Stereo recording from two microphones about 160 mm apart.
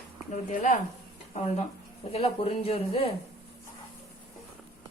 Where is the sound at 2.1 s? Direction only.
40° left (ahead or behind).